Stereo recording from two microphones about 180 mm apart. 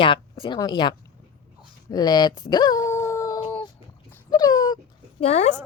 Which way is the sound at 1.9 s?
25° left (ahead or behind).